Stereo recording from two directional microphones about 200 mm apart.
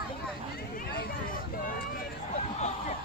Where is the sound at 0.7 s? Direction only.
50° left (ahead or behind).